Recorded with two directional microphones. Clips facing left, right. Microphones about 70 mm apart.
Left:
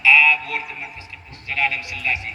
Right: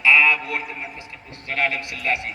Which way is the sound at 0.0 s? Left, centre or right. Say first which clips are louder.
Left 1 dB; right.